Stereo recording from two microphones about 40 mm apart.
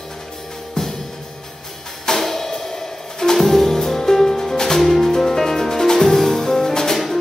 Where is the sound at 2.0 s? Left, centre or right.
Centre.